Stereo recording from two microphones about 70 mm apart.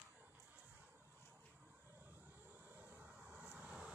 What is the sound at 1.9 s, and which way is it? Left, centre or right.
Vehicle, right.